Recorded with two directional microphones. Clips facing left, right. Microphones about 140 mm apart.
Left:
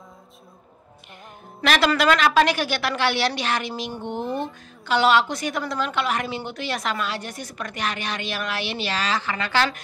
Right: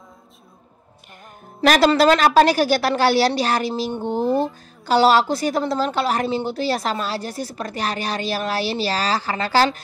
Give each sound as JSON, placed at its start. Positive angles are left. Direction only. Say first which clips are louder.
{"t": 1.6, "sound": "a woman's voice", "louder": "right 6 dB", "side_deg": -40}